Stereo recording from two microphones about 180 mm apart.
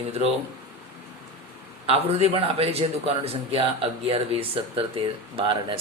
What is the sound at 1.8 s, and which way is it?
A man's voice, 35° right (ahead or behind).